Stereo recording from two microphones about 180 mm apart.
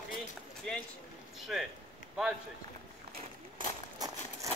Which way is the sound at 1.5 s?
Centre (ahead or behind).